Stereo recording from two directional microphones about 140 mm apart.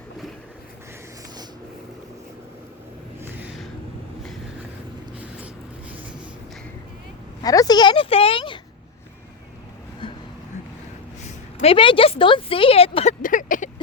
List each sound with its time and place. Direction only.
7.4 s a woman's voice: 25° left (ahead or behind)
11.6 s speech: 40° left (ahead or behind)
13.2 s a sound: 70° left (ahead or behind)